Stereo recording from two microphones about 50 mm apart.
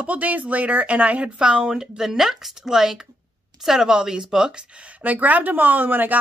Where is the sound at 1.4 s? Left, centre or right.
Centre.